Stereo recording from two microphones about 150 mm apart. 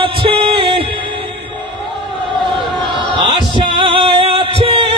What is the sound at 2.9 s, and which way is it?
Music, 30° right (ahead or behind).